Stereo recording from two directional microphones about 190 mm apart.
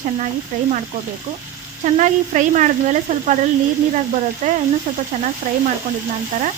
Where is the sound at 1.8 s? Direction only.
40° right (ahead or behind).